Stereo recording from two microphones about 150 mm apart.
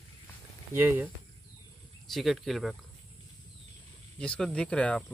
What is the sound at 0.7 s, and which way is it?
Speech, 15° right (ahead or behind).